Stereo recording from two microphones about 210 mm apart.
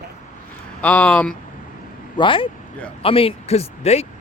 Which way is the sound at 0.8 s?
5° left (ahead or behind).